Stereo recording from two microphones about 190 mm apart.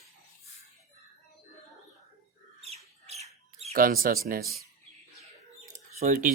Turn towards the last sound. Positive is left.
turn(degrees=-40)  # may be behind; listen again after turning